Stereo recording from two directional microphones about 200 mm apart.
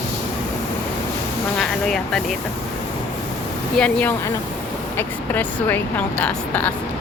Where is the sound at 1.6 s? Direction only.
Centre (ahead or behind).